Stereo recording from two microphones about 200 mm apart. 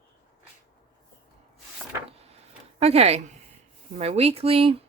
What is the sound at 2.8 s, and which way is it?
Speech, 30° right (ahead or behind).